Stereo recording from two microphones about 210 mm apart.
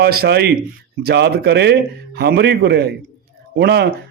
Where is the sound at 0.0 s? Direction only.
50° right (ahead or behind).